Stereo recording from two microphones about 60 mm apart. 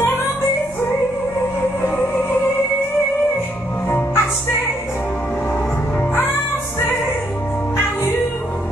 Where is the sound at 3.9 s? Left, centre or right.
Left.